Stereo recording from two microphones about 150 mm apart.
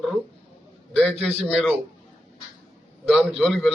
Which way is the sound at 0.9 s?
5° left (ahead or behind).